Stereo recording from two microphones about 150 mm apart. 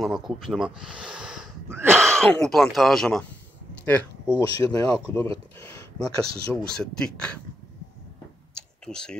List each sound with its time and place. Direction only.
0.0 s speech: centre (ahead or behind)
1.7 s a sound: 15° right (ahead or behind)
2.0 s speech: 5° left (ahead or behind)
4.4 s speech: 25° left (ahead or behind)
6.7 s speech: 5° left (ahead or behind)
8.8 s speech: 5° left (ahead or behind)